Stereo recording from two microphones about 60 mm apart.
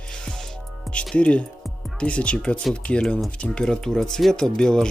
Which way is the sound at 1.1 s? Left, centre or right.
Left.